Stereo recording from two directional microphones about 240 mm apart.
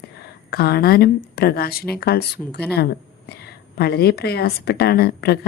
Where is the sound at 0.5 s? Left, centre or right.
Left.